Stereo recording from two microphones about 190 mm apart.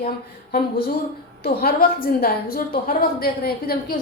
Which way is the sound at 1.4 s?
55° left (ahead or behind).